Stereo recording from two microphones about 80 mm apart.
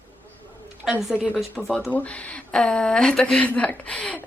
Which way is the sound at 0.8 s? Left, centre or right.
Centre.